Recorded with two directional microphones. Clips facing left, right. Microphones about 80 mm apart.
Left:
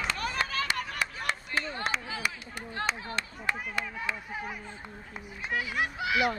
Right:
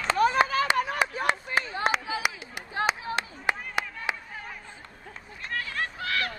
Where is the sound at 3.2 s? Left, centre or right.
Right.